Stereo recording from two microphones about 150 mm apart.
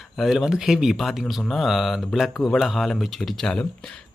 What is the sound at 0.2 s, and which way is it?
Speech, centre (ahead or behind).